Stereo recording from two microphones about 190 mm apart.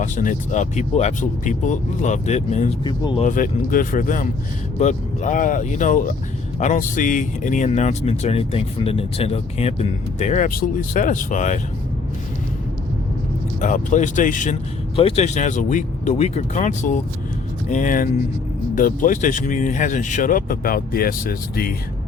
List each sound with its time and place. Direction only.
0.0 s speech: 40° left (ahead or behind)
2.8 s speech: 25° left (ahead or behind)
3.2 s speech: 45° left (ahead or behind)
13.6 s speech: 40° left (ahead or behind)
14.9 s speech: 30° left (ahead or behind); by 21.8 s 50° left (ahead or behind)